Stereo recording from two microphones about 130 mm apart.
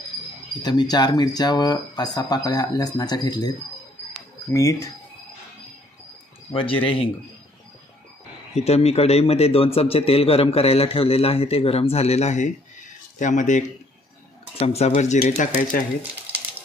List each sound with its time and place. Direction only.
0.6 s speech: 35° left (ahead or behind)
6.5 s speech: 45° left (ahead or behind)
8.5 s speech: 55° left (ahead or behind); by 13.7 s 70° left (ahead or behind)
14.6 s speech: 55° left (ahead or behind); by 15.8 s 75° left (ahead or behind)